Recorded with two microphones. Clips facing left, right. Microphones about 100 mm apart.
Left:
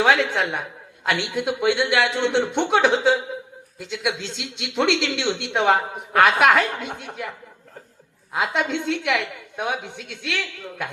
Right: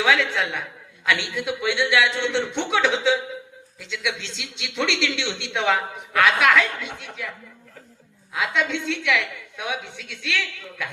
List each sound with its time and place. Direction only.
0.0 s speech: 55° left (ahead or behind)